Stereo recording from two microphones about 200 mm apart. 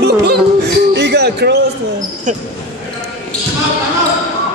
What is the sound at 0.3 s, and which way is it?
Music, 55° right (ahead or behind).